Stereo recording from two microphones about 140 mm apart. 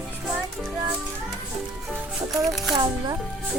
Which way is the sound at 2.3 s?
Centre (ahead or behind).